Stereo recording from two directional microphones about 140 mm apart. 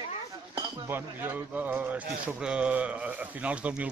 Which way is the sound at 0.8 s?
15° right (ahead or behind).